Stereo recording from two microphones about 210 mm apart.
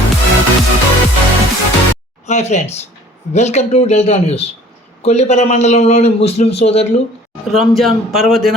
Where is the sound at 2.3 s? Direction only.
30° left (ahead or behind).